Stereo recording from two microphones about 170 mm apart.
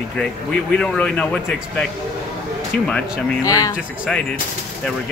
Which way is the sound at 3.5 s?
20° left (ahead or behind).